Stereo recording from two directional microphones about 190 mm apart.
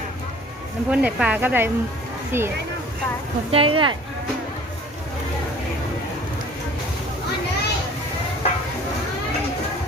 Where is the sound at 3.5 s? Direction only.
30° right (ahead or behind).